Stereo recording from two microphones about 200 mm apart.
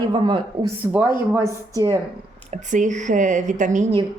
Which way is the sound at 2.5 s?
40° right (ahead or behind).